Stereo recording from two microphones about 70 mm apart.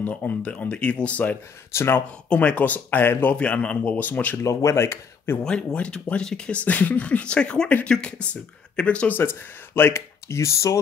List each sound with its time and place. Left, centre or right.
0.0 s speech: left
1.7 s speech: left
2.2 s speech: centre
3.3 s speech: centre
4.4 s speech: left
5.4 s speech: centre; by 10.8 s left